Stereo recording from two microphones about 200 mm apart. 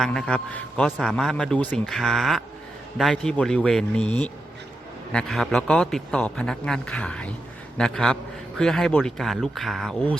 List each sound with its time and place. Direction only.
0.0 s a man's voice: 5° left (ahead or behind)